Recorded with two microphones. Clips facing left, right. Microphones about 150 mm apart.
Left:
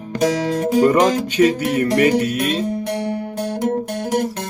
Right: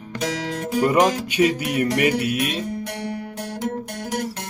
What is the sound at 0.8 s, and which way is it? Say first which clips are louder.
Music: left 2 dB; 10° right (ahead or behind).